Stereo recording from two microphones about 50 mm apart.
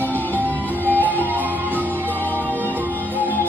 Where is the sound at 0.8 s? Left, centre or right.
Right.